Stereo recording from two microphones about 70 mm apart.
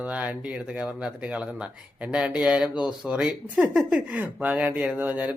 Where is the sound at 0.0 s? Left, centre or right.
Right.